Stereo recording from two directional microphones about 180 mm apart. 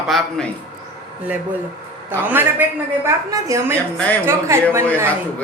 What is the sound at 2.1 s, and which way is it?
A woman's voice, 10° right (ahead or behind).